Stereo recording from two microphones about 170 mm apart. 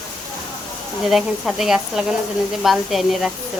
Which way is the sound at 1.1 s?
Centre (ahead or behind).